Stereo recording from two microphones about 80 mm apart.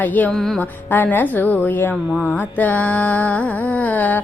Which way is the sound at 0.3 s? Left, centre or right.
Centre.